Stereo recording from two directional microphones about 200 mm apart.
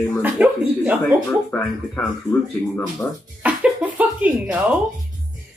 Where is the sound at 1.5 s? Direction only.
10° left (ahead or behind).